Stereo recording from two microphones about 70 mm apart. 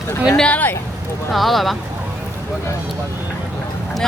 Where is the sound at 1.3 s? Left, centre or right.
Centre.